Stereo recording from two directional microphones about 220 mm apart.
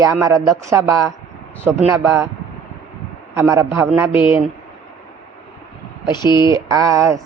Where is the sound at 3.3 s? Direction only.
15° right (ahead or behind).